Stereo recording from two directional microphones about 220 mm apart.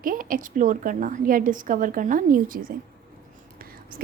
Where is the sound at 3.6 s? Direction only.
40° right (ahead or behind).